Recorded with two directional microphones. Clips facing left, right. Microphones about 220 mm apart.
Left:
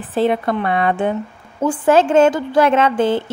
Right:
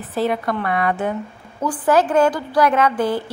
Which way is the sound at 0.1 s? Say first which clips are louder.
Left 4 dB; 25° left (ahead or behind).